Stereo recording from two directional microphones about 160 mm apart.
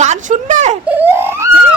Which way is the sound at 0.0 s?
50° right (ahead or behind).